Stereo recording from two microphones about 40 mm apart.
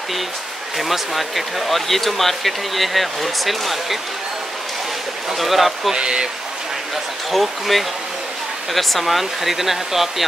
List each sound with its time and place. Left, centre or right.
0.7 s speech: centre
5.4 s speech: centre
5.9 s speech: right
7.2 s speech: centre